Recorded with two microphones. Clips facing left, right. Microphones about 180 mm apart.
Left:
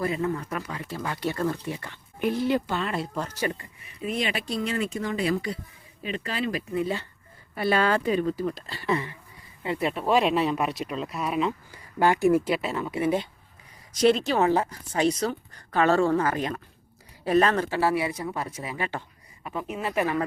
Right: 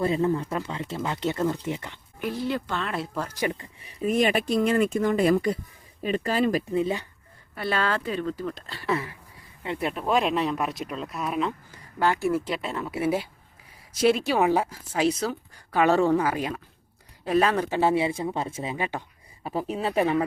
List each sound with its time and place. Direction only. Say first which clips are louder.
0.0 s speech: right 4 dB; 30° right (ahead or behind)
2.1 s speech: left 4 dB; 20° left (ahead or behind)
2.7 s a woman's voice: left 1 dB; centre (ahead or behind)
3.8 s speech: right 6 dB; 45° right (ahead or behind)
6.7 s speech: right 2 dB; 20° right (ahead or behind)
7.5 s speech: left 4 dB; 10° left (ahead or behind)
11.9 s a woman's voice: left 4 dB; 15° left (ahead or behind); by 19.0 s 15° right (ahead or behind)
19.4 s speech: right 3 dB; 35° right (ahead or behind)